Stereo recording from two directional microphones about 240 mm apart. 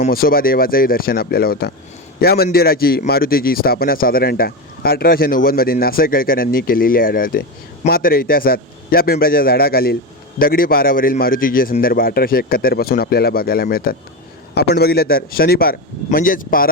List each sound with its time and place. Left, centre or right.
0.0 s a man's voice: left